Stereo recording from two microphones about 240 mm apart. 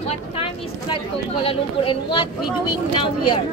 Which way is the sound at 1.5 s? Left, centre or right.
Left.